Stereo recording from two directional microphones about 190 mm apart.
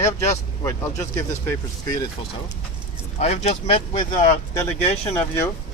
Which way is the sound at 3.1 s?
35° left (ahead or behind).